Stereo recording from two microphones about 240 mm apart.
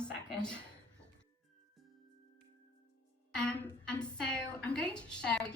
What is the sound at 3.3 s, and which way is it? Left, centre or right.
Speech, centre.